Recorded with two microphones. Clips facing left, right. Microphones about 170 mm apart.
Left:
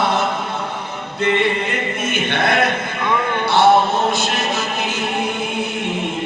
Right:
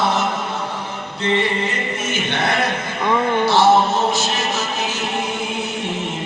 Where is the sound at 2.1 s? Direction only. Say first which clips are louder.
Left 3 dB; 55° left (ahead or behind).